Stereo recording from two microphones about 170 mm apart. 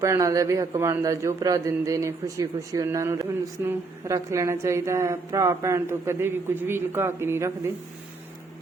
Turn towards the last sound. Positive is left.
turn(degrees=-15)  # may be behind; listen again after turning